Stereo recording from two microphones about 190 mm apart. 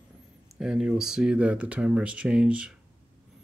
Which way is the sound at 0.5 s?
Centre (ahead or behind).